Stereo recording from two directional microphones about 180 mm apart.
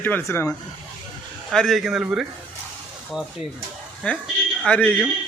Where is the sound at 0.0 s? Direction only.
15° left (ahead or behind).